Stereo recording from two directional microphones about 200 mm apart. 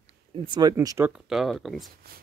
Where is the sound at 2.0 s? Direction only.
50° right (ahead or behind).